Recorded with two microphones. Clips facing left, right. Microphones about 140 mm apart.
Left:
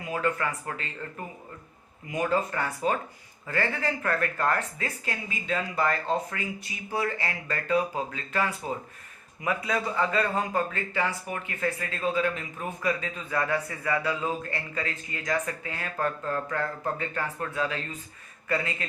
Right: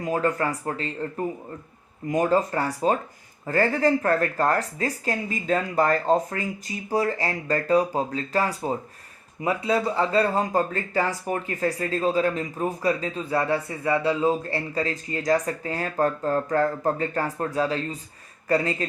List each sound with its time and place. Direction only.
0.0 s a man's voice: 40° right (ahead or behind)